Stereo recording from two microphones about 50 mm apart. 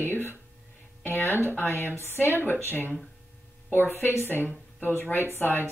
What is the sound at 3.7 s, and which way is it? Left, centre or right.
Speech, left.